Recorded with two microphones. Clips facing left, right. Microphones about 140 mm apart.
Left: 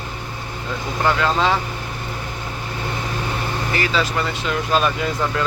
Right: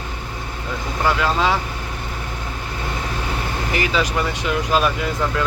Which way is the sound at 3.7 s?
15° right (ahead or behind).